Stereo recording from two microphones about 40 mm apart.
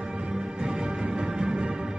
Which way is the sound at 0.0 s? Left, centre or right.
Right.